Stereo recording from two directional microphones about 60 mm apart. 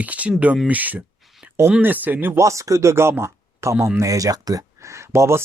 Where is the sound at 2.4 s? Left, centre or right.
Right.